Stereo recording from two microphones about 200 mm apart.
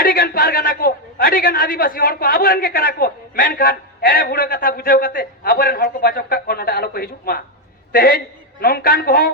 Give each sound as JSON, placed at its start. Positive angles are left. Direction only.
{"t": 0.0, "sound": "a man's voice", "side_deg": 45}